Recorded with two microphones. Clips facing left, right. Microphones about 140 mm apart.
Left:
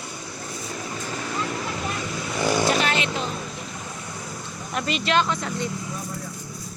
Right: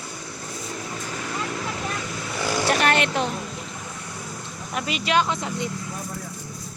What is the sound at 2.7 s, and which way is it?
Vehicle, 55° right (ahead or behind).